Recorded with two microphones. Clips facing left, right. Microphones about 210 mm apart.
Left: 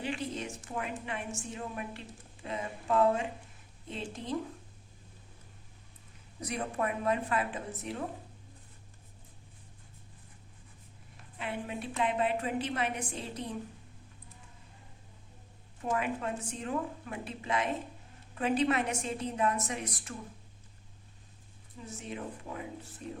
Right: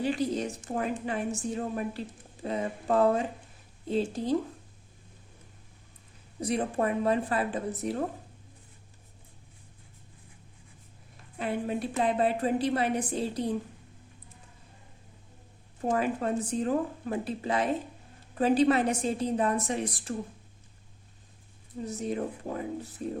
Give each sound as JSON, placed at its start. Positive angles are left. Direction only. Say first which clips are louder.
{"t": 0.0, "sound": "a woman's voice", "louder": "right 7 dB", "side_deg": -40}
{"t": 6.4, "sound": "a woman's voice", "louder": "right 6 dB", "side_deg": -30}
{"t": 11.3, "sound": "a woman's voice", "louder": "right 7 dB", "side_deg": -40}
{"t": 15.8, "sound": "a woman's voice", "louder": "right 5 dB", "side_deg": -35}
{"t": 21.8, "sound": "a woman's voice", "louder": "right 8 dB", "side_deg": -40}